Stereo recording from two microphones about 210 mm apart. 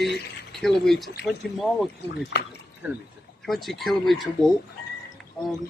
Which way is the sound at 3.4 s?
Centre (ahead or behind).